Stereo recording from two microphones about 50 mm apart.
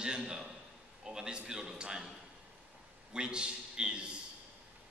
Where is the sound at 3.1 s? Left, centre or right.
Centre.